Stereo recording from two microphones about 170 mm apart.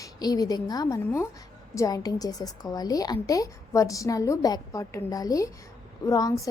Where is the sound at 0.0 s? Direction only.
20° left (ahead or behind).